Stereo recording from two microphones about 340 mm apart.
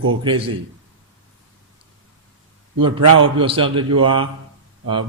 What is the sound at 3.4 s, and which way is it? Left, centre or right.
Speech, centre.